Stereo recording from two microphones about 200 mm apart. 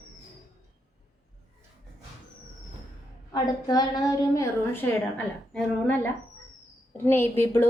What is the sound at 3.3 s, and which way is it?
A woman's voice, 20° left (ahead or behind).